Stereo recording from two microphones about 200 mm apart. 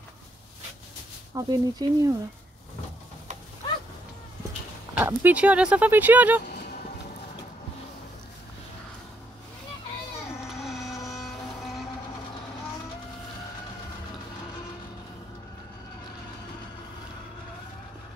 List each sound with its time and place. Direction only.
1.3 s speech: 15° right (ahead or behind)
4.9 s speech: 10° right (ahead or behind)
10.5 s a sound: centre (ahead or behind)